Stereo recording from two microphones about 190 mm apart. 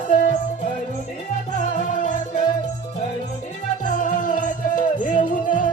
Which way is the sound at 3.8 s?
45° left (ahead or behind).